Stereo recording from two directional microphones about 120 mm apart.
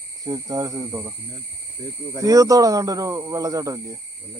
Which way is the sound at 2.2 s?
30° right (ahead or behind).